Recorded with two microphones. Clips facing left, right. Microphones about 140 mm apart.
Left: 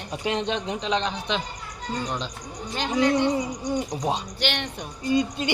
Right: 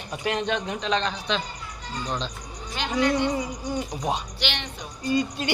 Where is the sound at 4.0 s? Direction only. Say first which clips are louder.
Left 1 dB; 25° left (ahead or behind).